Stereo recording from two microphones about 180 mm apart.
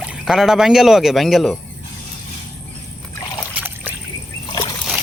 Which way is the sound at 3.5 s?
10° right (ahead or behind).